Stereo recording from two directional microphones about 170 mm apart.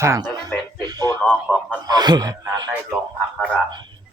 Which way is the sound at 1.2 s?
5° left (ahead or behind).